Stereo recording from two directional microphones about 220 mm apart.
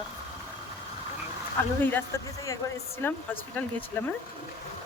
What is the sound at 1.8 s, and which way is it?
Speech, 10° left (ahead or behind).